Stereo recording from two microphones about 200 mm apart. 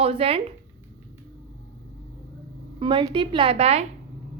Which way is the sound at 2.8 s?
25° right (ahead or behind).